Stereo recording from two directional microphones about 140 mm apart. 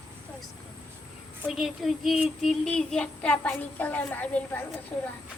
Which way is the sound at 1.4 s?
Centre (ahead or behind).